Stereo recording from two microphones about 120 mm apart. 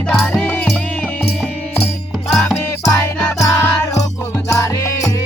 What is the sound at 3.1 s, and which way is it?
Music, 25° left (ahead or behind).